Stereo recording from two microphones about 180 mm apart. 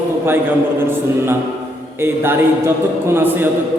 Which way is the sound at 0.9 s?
15° right (ahead or behind).